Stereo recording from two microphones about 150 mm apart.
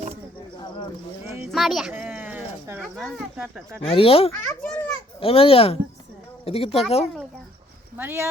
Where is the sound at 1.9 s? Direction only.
15° right (ahead or behind).